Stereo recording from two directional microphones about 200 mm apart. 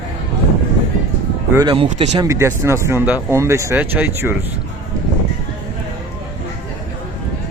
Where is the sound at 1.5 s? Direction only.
25° right (ahead or behind).